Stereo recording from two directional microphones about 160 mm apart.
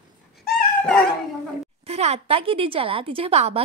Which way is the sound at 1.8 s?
40° right (ahead or behind).